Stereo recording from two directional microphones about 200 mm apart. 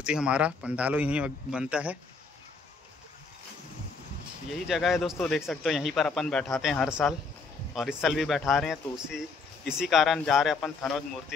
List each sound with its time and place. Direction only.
0.0 s speech: 5° right (ahead or behind)
4.5 s speech: centre (ahead or behind)